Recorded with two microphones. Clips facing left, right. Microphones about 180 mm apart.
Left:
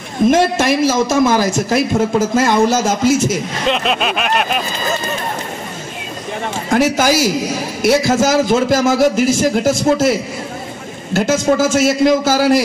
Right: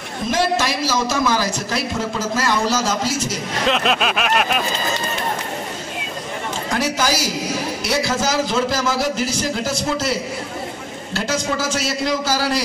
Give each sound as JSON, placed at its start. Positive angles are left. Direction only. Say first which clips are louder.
{"t": 0.3, "sound": "a man's voice", "louder": "left 5 dB", "side_deg": 50}
{"t": 3.6, "sound": "a sound", "louder": "left 1 dB", "side_deg": 0}
{"t": 6.7, "sound": "a man's voice", "louder": "left 8 dB", "side_deg": 50}
{"t": 11.1, "sound": "a man's voice", "louder": "left 9 dB", "side_deg": 50}